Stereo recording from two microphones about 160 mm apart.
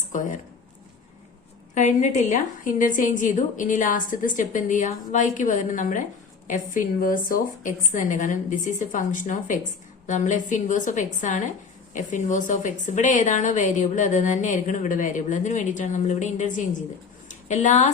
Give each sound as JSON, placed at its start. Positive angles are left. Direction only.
{"t": 0.1, "sound": "speech", "side_deg": 50}
{"t": 1.7, "sound": "a woman's voice", "side_deg": 50}
{"t": 17.2, "sound": "a sound", "side_deg": 50}